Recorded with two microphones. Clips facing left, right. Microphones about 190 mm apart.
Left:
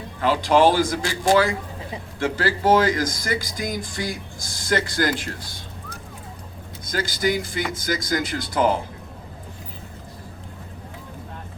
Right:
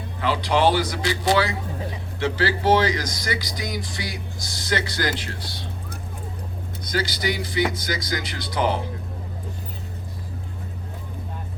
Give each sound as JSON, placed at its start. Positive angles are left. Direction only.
{"t": 0.2, "sound": "speech", "side_deg": 45}
{"t": 6.8, "sound": "speech", "side_deg": 50}